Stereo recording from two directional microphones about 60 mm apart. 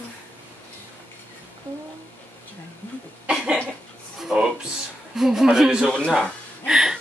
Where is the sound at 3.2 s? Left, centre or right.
Centre.